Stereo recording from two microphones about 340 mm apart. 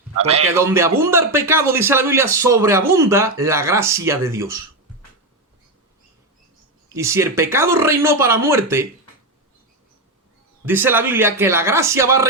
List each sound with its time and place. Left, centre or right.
0.2 s a man's voice: centre
0.5 s a man's voice: centre
6.8 s a man's voice: centre
10.7 s a man's voice: centre